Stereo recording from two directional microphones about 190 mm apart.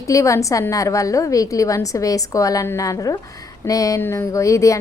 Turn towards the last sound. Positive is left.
turn(degrees=15)  # may be behind; listen again after turning